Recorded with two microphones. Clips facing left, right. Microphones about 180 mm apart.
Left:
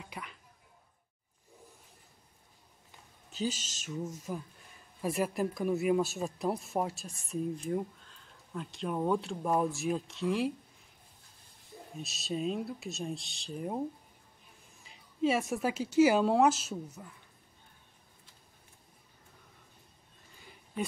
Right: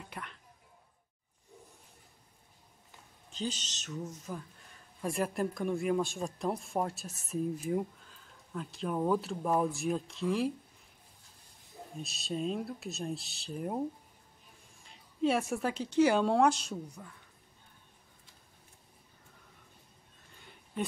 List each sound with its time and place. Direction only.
0.0 s a sound: 5° left (ahead or behind)
3.3 s speech: 5° left (ahead or behind)
12.0 s a woman's voice: centre (ahead or behind)